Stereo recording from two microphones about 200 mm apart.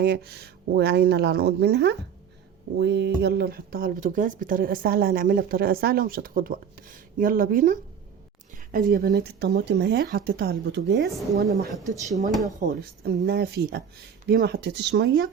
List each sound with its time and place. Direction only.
0.0 s speech: 50° right (ahead or behind)
11.9 s speech: 15° right (ahead or behind)
12.5 s speech: 45° right (ahead or behind)